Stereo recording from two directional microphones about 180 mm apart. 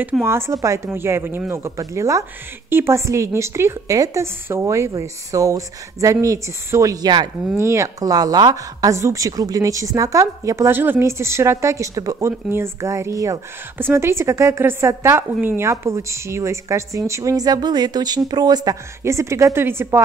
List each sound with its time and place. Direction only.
0.0 s speech: 10° right (ahead or behind)